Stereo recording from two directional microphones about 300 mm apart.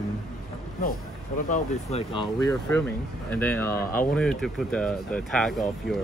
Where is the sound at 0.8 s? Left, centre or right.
Left.